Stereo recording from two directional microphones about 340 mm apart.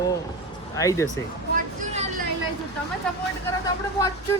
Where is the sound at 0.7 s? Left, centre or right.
Centre.